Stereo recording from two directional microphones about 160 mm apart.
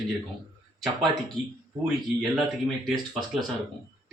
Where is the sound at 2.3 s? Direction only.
Centre (ahead or behind).